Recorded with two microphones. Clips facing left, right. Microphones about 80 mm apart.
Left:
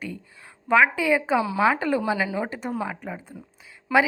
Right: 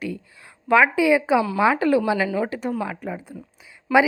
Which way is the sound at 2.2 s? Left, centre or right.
Centre.